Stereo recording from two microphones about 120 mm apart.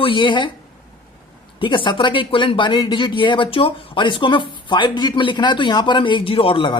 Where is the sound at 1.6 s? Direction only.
45° left (ahead or behind).